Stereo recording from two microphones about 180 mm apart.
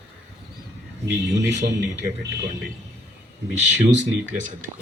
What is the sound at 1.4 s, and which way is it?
Speech, 75° right (ahead or behind).